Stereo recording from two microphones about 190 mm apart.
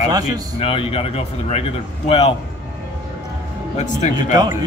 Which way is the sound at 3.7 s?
40° left (ahead or behind).